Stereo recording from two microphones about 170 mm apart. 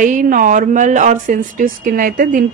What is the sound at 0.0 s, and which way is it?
Speech, 50° right (ahead or behind).